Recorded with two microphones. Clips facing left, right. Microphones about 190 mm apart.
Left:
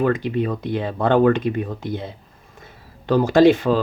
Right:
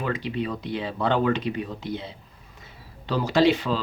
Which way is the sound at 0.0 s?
50° left (ahead or behind).